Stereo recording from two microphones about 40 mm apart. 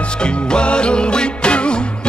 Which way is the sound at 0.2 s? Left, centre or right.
Left.